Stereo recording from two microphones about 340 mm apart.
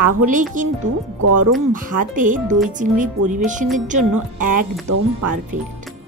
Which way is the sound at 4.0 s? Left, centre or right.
Right.